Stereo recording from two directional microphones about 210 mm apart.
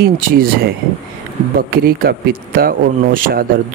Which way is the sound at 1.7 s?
45° right (ahead or behind).